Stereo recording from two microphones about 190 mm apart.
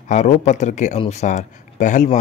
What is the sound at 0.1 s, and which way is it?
A man's voice, 40° left (ahead or behind).